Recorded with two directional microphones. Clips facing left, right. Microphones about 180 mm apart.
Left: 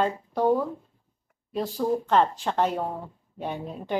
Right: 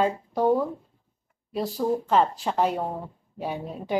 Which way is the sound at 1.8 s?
5° right (ahead or behind).